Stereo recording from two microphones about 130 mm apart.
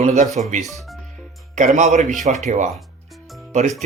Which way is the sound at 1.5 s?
70° right (ahead or behind).